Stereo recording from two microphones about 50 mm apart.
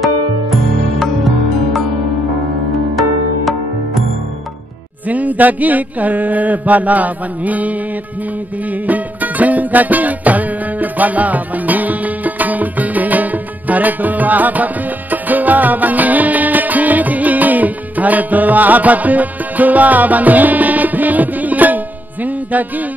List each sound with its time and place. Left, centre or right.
0.0 s music: centre
5.0 s a sound: right
8.6 s music: right